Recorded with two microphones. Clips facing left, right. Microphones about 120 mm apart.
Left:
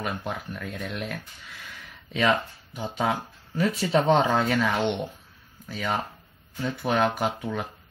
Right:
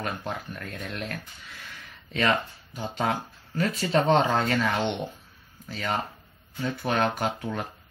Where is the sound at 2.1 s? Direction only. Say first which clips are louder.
Left 2 dB; 5° left (ahead or behind).